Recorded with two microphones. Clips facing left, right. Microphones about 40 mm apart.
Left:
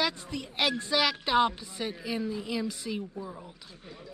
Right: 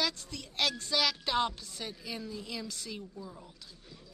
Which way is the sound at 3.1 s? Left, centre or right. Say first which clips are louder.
Left 6 dB; left.